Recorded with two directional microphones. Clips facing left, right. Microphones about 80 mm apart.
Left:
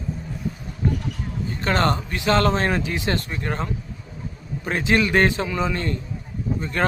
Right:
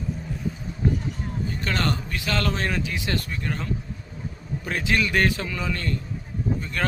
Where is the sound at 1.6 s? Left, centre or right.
Left.